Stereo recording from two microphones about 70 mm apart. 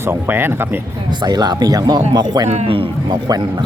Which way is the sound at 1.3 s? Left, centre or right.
Right.